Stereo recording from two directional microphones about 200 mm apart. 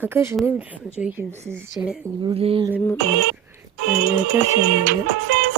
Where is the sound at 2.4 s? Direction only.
30° right (ahead or behind).